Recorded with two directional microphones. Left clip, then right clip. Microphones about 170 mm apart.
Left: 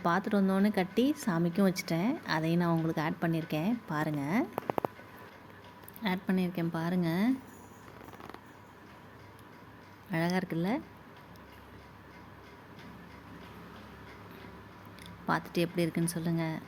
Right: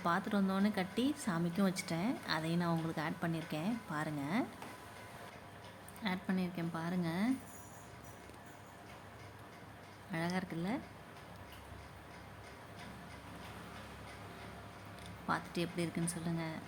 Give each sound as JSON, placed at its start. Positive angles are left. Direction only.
{"t": 0.0, "sound": "a woman's voice", "side_deg": 15}
{"t": 6.0, "sound": "a woman's voice", "side_deg": 20}
{"t": 10.1, "sound": "a woman's voice", "side_deg": 25}
{"t": 15.3, "sound": "a woman's voice", "side_deg": 20}